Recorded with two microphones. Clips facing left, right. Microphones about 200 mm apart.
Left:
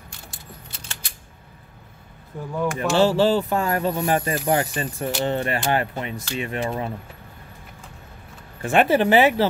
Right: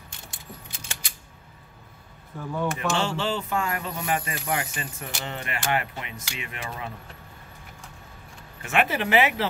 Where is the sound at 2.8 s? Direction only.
35° left (ahead or behind).